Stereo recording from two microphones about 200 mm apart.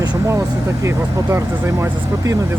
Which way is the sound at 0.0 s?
20° right (ahead or behind).